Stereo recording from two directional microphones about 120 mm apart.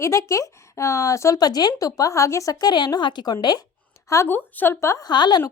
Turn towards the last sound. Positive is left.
turn(degrees=35)  # may be behind; listen again after turning